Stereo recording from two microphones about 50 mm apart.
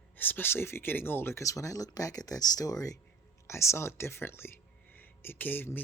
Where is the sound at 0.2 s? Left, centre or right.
Left.